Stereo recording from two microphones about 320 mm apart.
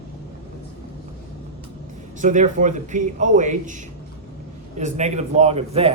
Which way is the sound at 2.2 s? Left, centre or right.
Right.